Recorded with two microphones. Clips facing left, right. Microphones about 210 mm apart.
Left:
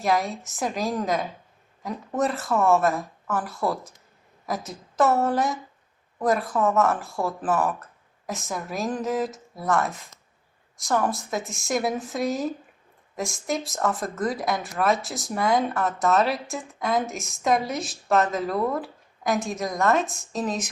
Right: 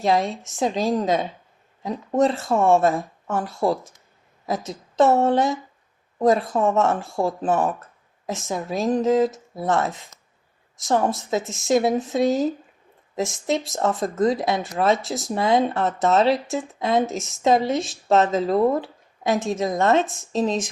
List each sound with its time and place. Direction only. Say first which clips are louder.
0.0 s speech: right 3 dB; 25° right (ahead or behind)
14.9 s speech: right 5 dB; centre (ahead or behind)
15.3 s speech: right 3 dB; 25° right (ahead or behind)